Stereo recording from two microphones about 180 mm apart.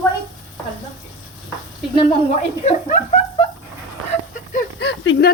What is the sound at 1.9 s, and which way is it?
Speech, 30° left (ahead or behind).